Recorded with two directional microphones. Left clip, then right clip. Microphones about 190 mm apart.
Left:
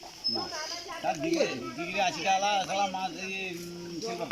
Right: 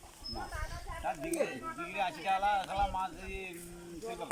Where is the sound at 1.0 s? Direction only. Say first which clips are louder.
Left 6 dB; 25° left (ahead or behind).